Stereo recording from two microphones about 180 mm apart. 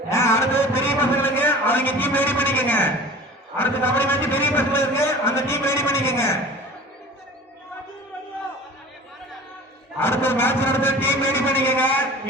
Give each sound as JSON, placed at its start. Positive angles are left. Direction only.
{"t": 0.1, "sound": "a sound", "side_deg": 15}
{"t": 3.6, "sound": "a man's voice", "side_deg": 10}
{"t": 10.0, "sound": "a man's voice", "side_deg": 10}